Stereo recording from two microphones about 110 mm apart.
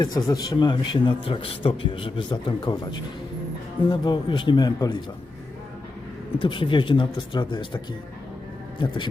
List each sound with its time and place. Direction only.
0.0 s a man's voice: 35° left (ahead or behind)
6.4 s a man's voice: 50° left (ahead or behind)